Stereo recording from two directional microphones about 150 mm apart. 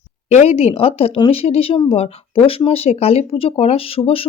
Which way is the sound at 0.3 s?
45° left (ahead or behind).